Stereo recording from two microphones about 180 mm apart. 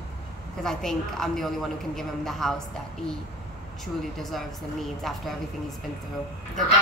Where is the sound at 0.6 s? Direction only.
5° left (ahead or behind).